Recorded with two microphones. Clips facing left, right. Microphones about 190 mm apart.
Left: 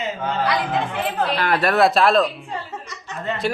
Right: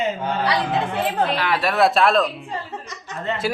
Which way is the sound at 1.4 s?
50° left (ahead or behind).